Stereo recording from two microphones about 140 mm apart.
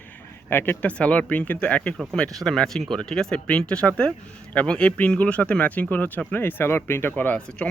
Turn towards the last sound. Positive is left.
turn(degrees=10)  # may be behind; listen again after turning